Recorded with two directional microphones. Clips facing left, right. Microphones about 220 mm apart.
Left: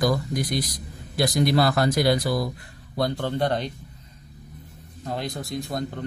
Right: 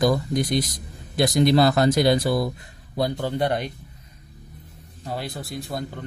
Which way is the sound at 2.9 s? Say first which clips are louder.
Right 1 dB; 10° right (ahead or behind).